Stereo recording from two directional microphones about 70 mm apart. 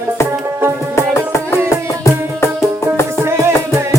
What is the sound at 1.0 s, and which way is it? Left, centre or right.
Music, left.